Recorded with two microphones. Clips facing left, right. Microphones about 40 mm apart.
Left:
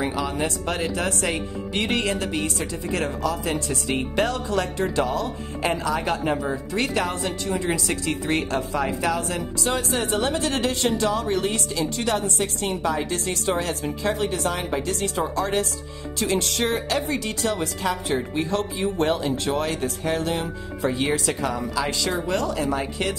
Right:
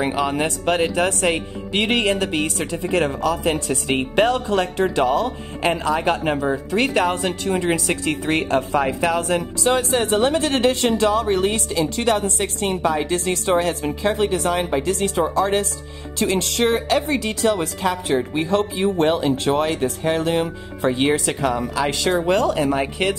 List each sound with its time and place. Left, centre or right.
0.0 s speech: right
16.2 s speech: right